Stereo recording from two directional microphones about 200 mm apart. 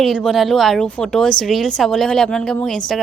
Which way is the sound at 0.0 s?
Centre (ahead or behind).